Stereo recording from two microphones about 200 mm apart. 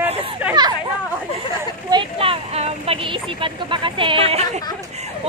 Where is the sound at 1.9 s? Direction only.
25° right (ahead or behind).